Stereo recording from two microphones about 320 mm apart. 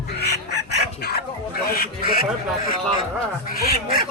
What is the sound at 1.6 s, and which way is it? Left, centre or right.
Speech, left.